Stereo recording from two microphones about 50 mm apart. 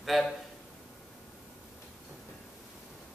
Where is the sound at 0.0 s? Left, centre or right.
Centre.